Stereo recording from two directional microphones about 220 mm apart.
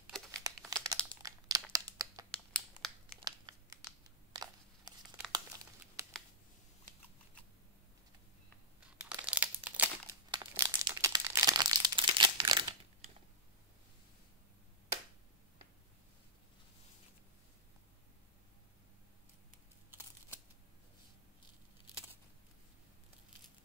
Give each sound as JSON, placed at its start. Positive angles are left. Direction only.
{"t": 0.0, "sound": "crumpling", "side_deg": 0}
{"t": 0.7, "sound": "crumpling", "side_deg": -15}
{"t": 2.8, "sound": "a sound", "side_deg": -20}
{"t": 3.2, "sound": "crumpling", "side_deg": -20}
{"t": 6.0, "sound": "a sound", "side_deg": -10}
{"t": 8.9, "sound": "crumpling", "side_deg": -5}
{"t": 10.3, "sound": "crumpling", "side_deg": -20}